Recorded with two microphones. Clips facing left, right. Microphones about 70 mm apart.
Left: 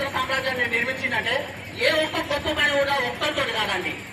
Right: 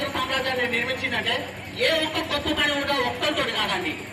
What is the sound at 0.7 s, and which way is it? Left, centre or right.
A woman's voice, centre.